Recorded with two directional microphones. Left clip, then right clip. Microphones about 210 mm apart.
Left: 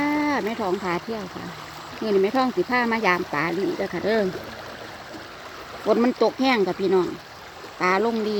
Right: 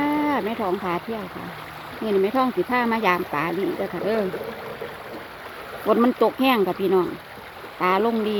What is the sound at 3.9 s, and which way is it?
Speech, 20° left (ahead or behind).